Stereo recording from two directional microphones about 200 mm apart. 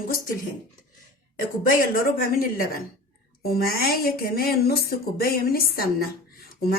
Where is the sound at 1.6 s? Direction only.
45° left (ahead or behind).